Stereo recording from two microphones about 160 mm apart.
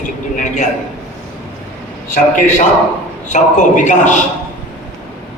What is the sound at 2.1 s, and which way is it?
A man's voice, 50° left (ahead or behind).